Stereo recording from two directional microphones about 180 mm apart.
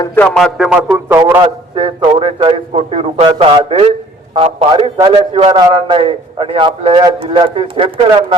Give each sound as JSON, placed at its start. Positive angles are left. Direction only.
{"t": 0.3, "sound": "a man's voice", "side_deg": 0}
{"t": 1.4, "sound": "a man's voice", "side_deg": -30}